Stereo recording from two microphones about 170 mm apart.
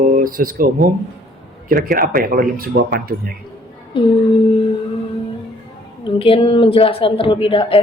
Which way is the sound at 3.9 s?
30° left (ahead or behind).